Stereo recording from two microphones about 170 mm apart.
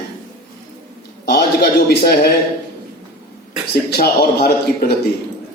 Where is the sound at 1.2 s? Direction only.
60° left (ahead or behind).